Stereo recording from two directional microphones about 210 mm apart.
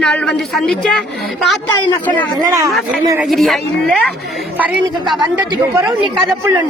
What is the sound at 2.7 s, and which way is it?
Speech, centre (ahead or behind).